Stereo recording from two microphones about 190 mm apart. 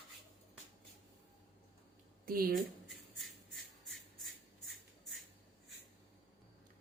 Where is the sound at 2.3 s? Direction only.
50° right (ahead or behind).